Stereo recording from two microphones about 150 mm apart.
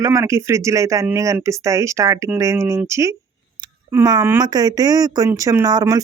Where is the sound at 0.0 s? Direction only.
20° right (ahead or behind).